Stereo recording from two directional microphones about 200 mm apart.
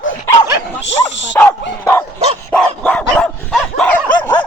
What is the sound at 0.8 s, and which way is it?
Dog, 65° left (ahead or behind).